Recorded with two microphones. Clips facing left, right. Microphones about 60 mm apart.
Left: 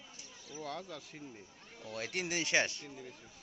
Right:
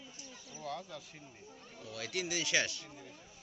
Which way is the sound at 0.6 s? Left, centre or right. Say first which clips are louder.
Right 1 dB; left.